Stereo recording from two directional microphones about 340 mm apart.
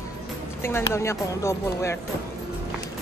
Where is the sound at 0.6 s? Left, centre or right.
Centre.